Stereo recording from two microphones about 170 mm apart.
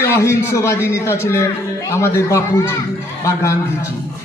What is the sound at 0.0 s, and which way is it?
A man's voice, 15° left (ahead or behind).